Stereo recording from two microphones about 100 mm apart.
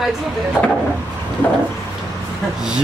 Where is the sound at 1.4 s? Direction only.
20° left (ahead or behind).